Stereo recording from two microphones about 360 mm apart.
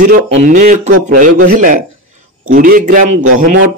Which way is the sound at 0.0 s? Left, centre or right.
Right.